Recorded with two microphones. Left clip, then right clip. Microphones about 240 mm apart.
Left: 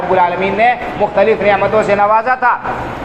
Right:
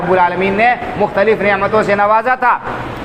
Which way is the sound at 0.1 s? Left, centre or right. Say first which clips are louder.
Even; right.